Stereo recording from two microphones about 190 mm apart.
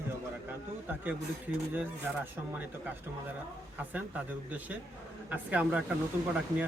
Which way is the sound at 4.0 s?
10° right (ahead or behind).